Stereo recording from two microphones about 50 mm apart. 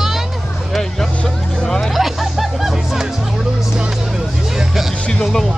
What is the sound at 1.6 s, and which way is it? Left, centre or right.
Hubbub, centre.